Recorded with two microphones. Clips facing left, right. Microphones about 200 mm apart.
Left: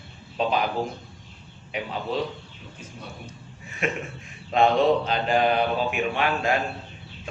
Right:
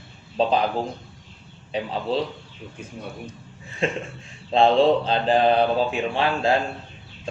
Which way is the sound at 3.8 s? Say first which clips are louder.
Right 3 dB; 30° right (ahead or behind).